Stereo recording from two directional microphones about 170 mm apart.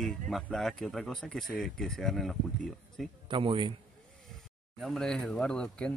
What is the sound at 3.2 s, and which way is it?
Speech, 30° right (ahead or behind).